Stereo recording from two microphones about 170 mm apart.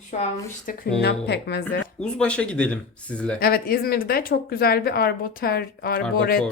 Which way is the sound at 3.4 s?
60° left (ahead or behind).